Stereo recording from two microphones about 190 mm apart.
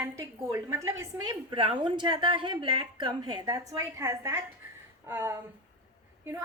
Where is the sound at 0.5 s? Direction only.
15° right (ahead or behind).